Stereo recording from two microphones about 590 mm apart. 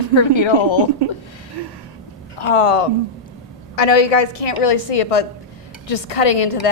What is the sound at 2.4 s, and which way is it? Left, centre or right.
Speech, left.